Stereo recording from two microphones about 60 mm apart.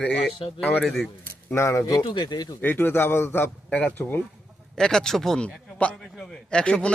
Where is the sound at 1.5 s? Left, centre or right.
Left.